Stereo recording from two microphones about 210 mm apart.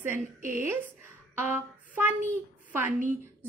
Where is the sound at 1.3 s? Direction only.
10° right (ahead or behind).